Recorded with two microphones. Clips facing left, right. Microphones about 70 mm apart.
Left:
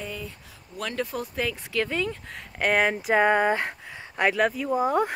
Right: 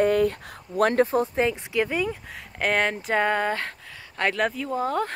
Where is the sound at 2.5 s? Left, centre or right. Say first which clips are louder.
Left 1 dB; centre.